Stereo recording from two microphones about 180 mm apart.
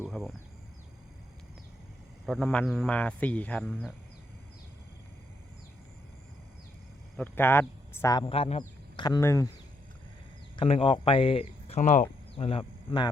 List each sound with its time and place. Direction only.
0.1 s speech: centre (ahead or behind)
2.2 s speech: centre (ahead or behind)
7.2 s speech: 10° left (ahead or behind)
8.2 s a man's voice: 30° left (ahead or behind)
9.0 s speech: 15° left (ahead or behind)
10.6 s speech: 30° left (ahead or behind)